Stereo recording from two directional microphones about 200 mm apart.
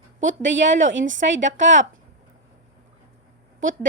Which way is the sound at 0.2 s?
70° right (ahead or behind).